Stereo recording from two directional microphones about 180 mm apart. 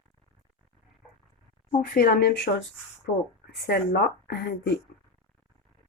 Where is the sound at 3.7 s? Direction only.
65° left (ahead or behind).